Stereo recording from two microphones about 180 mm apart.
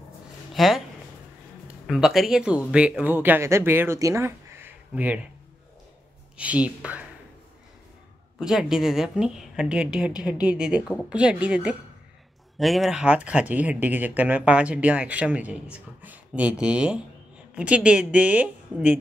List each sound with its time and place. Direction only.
0.6 s speech: centre (ahead or behind)
1.9 s a woman's voice: 5° right (ahead or behind)
6.3 s speech: 5° right (ahead or behind)
8.4 s a woman's voice: 5° right (ahead or behind)